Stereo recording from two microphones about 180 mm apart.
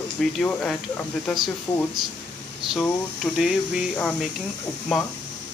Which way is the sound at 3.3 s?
Centre (ahead or behind).